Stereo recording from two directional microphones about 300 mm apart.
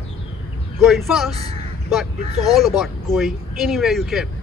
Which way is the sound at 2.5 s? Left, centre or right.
Centre.